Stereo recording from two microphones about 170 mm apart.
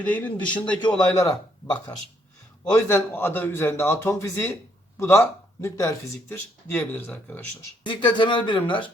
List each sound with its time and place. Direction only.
0.0 s a man's voice: 10° left (ahead or behind)
0.8 s speech: 25° left (ahead or behind)
2.7 s a man's voice: 15° left (ahead or behind)
7.9 s speech: 30° left (ahead or behind)